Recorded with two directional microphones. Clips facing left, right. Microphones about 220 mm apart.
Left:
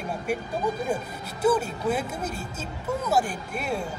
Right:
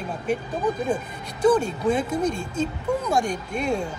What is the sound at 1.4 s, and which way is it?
Speech, 5° left (ahead or behind).